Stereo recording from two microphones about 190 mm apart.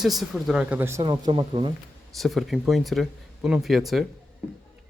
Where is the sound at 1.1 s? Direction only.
25° right (ahead or behind).